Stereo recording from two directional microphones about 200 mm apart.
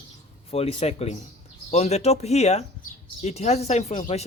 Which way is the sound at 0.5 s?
30° left (ahead or behind).